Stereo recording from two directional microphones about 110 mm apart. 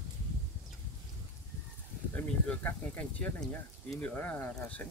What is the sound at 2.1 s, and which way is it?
Speech, 15° left (ahead or behind).